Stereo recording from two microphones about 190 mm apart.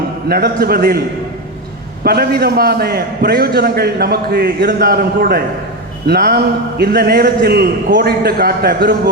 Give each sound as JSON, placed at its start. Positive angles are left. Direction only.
{"t": 0.3, "sound": "a man's voice", "side_deg": -55}
{"t": 2.0, "sound": "a man's voice", "side_deg": -55}